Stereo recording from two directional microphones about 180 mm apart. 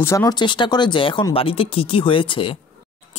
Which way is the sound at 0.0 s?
15° left (ahead or behind).